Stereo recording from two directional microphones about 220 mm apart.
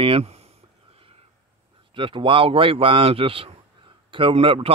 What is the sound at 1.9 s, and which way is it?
Speech, 25° right (ahead or behind).